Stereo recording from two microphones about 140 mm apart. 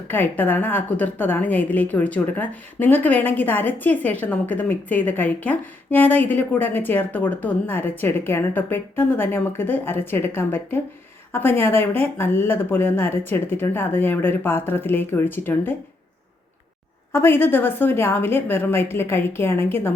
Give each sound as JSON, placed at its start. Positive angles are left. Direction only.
{"t": 0.1, "sound": "a woman's voice", "side_deg": 15}
{"t": 17.1, "sound": "a woman's voice", "side_deg": 15}